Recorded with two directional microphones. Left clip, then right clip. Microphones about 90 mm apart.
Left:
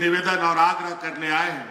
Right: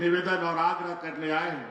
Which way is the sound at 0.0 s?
50° left (ahead or behind).